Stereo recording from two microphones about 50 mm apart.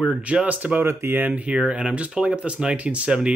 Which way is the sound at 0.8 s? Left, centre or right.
Right.